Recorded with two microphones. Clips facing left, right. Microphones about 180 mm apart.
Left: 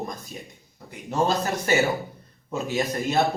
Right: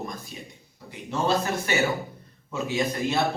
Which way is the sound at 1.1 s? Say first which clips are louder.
Left 1 dB; 40° left (ahead or behind).